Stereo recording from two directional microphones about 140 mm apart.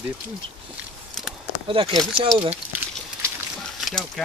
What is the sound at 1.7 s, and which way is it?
Speech, 40° right (ahead or behind).